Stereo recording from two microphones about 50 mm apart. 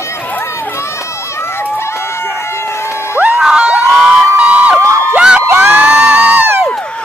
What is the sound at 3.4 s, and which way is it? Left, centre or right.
Crowd, centre.